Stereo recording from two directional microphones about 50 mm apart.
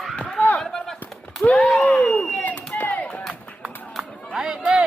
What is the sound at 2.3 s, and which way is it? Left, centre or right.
Chop, left.